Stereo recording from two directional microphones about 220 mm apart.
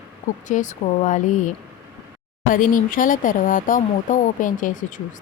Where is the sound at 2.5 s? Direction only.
40° left (ahead or behind).